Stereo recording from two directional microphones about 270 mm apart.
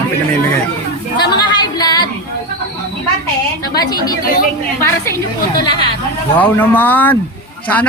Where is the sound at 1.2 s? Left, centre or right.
Centre.